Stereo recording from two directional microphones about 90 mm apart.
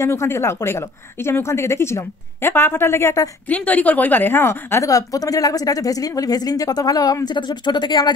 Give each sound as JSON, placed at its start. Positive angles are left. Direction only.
{"t": 0.0, "sound": "a woman's voice", "side_deg": 30}
{"t": 3.4, "sound": "a woman's voice", "side_deg": 15}
{"t": 4.9, "sound": "speech", "side_deg": 40}
{"t": 7.2, "sound": "speech", "side_deg": 55}